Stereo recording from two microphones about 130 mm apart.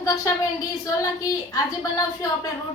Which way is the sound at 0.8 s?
25° left (ahead or behind).